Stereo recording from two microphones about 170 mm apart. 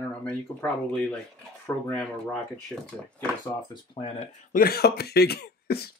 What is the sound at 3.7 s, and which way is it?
Speech, 30° left (ahead or behind).